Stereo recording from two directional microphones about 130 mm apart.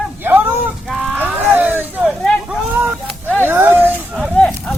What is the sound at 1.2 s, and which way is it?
Vehicle, 15° right (ahead or behind).